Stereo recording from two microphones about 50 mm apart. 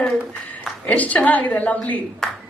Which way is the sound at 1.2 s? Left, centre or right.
Left.